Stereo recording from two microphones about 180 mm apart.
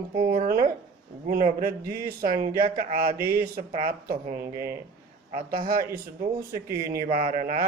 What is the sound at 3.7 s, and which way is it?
Mantra, 55° right (ahead or behind).